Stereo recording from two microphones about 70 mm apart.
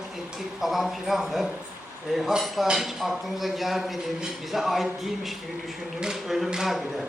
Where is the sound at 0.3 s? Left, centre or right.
Centre.